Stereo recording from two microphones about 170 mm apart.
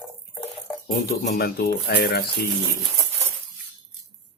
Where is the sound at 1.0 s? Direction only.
65° left (ahead or behind).